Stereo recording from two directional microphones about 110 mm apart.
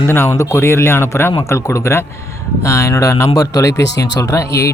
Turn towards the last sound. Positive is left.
turn(degrees=25)  # may be behind; listen again after turning